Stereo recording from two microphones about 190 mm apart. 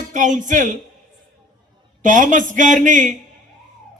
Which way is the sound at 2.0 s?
45° right (ahead or behind).